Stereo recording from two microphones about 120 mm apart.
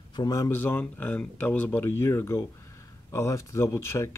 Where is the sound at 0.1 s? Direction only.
30° left (ahead or behind).